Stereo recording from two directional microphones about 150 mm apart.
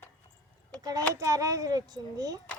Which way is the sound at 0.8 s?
25° right (ahead or behind).